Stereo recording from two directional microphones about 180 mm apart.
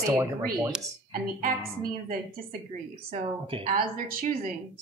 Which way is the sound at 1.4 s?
55° right (ahead or behind).